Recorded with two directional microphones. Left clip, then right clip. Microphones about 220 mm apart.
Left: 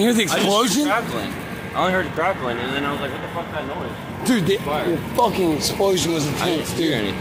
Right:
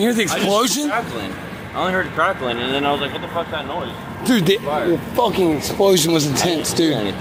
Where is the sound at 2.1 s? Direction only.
55° right (ahead or behind).